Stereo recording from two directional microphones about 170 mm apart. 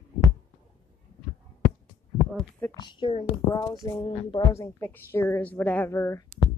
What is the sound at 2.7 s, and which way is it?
Speech, 25° left (ahead or behind).